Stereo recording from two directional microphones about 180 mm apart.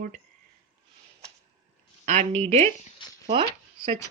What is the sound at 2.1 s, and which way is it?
Speech, 40° right (ahead or behind).